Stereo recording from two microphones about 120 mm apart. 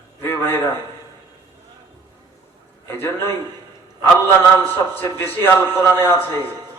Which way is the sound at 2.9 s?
20° left (ahead or behind).